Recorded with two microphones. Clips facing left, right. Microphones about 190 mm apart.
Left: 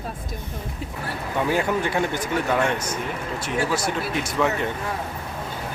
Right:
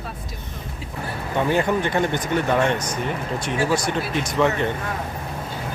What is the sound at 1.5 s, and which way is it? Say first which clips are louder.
Speech: right 2 dB; 5° left (ahead or behind).